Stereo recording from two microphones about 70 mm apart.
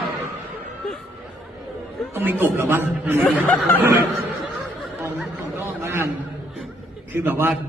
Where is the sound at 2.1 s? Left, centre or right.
Right.